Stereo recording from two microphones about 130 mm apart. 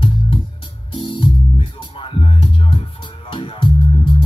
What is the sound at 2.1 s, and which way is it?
Music, 40° left (ahead or behind).